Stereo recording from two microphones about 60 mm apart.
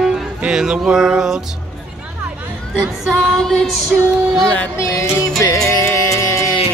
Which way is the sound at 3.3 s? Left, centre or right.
Centre.